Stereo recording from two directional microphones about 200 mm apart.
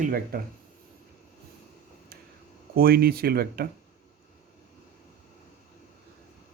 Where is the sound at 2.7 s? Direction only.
50° right (ahead or behind).